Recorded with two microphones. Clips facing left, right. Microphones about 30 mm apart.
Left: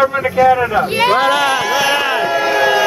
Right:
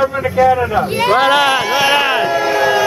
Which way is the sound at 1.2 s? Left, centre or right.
Centre.